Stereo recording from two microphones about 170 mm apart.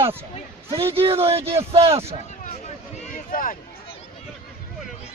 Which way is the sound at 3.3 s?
55° left (ahead or behind).